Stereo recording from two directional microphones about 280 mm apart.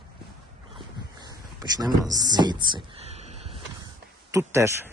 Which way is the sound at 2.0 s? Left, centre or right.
Centre.